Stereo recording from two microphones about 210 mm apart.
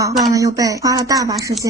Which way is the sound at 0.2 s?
15° right (ahead or behind).